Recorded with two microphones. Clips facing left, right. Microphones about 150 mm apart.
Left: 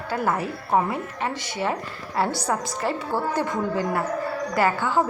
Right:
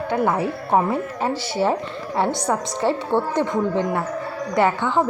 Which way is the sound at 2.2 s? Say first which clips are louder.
Right 3 dB; centre (ahead or behind).